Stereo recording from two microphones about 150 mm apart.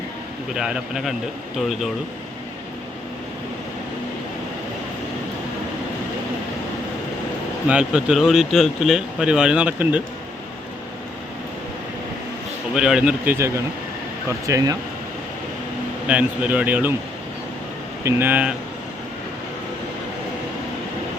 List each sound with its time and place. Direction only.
0.5 s speech: 5° right (ahead or behind)
7.7 s speech: 5° right (ahead or behind)
12.7 s speech: 5° right (ahead or behind); by 14.8 s 25° right (ahead or behind)
16.0 s speech: 10° right (ahead or behind)
18.0 s speech: 15° right (ahead or behind)